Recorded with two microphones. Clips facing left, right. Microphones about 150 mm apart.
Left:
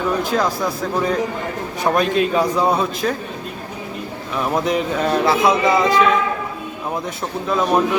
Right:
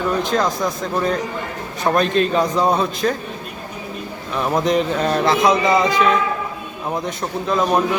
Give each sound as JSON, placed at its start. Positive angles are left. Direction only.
{"t": 0.2, "sound": "a man's voice", "side_deg": 5}
{"t": 4.4, "sound": "speech", "side_deg": 5}